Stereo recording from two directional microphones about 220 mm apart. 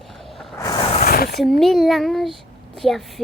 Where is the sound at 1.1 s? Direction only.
45° left (ahead or behind).